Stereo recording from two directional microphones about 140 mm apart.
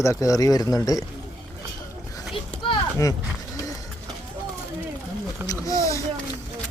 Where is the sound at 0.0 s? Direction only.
20° left (ahead or behind).